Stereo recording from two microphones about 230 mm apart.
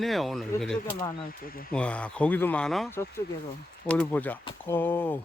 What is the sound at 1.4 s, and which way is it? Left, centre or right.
Speech, left.